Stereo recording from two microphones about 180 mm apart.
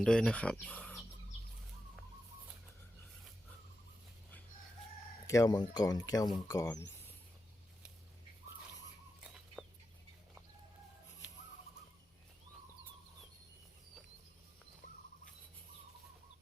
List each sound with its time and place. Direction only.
0.0 s speech: 5° left (ahead or behind)
0.5 s bird: 10° left (ahead or behind)
5.2 s speech: 20° left (ahead or behind)
9.6 s chicken: centre (ahead or behind)